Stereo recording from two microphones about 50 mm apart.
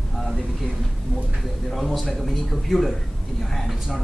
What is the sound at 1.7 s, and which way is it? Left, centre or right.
Speech, centre.